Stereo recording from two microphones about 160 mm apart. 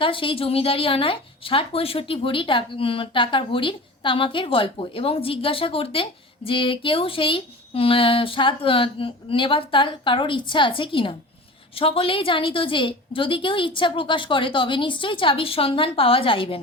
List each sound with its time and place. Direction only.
0.0 s a woman's voice: 35° left (ahead or behind)